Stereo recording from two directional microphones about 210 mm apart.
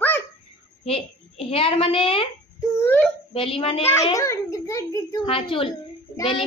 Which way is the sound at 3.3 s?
25° left (ahead or behind).